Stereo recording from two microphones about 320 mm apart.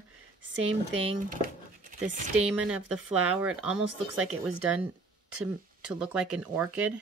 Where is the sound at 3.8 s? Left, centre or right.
Right.